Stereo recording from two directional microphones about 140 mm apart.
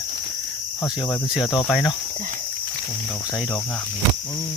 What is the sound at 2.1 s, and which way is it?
Speech, 65° right (ahead or behind).